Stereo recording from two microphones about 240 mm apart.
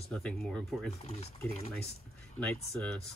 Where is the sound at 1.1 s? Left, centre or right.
Left.